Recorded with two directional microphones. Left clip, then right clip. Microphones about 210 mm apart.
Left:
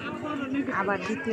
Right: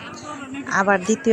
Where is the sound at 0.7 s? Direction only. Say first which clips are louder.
Right 12 dB; 30° right (ahead or behind).